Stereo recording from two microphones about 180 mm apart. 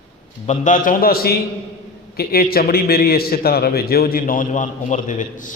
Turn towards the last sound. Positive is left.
turn(degrees=45)  # may be behind; listen again after turning